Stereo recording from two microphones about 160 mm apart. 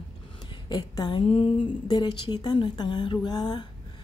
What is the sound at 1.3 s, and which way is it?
A woman's voice, 35° left (ahead or behind).